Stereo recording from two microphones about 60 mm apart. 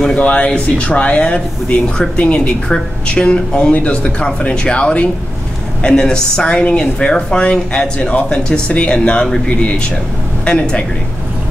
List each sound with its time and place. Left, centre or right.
0.1 s speech: centre